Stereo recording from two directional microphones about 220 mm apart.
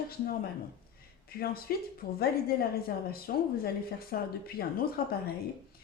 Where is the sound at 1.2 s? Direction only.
45° left (ahead or behind).